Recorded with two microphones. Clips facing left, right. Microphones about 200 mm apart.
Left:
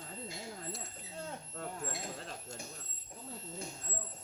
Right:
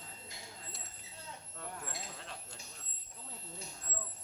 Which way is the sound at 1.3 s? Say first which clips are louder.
Left 2 dB; 50° left (ahead or behind).